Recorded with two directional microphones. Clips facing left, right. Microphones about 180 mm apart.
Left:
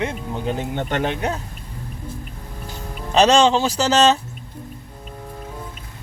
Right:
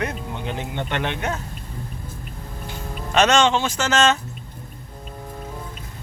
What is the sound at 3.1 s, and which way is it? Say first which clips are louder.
Speech: left 3 dB; 35° left (ahead or behind).